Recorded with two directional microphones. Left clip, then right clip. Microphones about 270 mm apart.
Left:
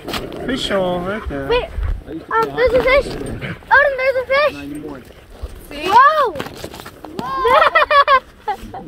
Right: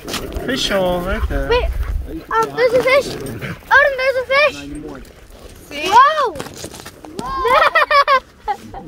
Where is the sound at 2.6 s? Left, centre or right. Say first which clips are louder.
Even; centre.